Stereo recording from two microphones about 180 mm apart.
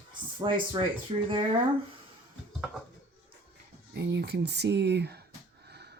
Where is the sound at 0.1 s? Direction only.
25° right (ahead or behind).